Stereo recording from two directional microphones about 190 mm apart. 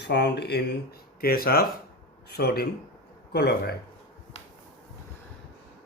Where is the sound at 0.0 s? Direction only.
60° left (ahead or behind).